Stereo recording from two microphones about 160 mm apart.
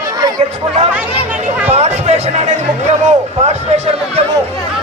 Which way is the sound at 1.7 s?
45° right (ahead or behind).